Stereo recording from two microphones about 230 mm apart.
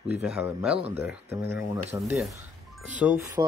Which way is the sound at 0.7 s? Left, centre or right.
Right.